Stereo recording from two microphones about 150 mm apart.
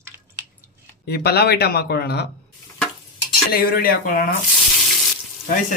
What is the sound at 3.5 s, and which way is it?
Speech, 85° left.